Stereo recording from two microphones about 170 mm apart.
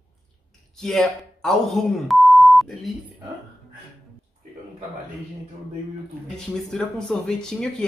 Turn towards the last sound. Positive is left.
turn(degrees=5)  # may be behind; listen again after turning